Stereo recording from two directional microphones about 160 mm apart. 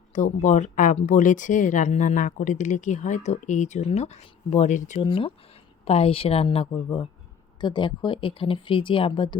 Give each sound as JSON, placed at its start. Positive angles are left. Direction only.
{"t": 0.1, "sound": "speech", "side_deg": 50}
{"t": 4.9, "sound": "speech", "side_deg": 30}